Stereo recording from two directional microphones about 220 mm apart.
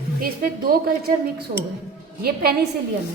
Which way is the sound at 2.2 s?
45° right (ahead or behind).